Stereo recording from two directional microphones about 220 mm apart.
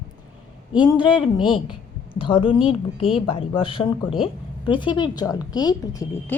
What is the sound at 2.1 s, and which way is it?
A woman's voice, 25° left (ahead or behind).